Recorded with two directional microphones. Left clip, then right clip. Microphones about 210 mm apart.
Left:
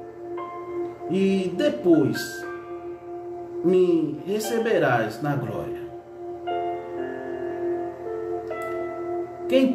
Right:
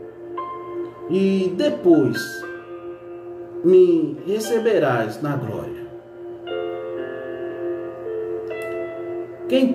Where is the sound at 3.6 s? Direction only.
Centre (ahead or behind).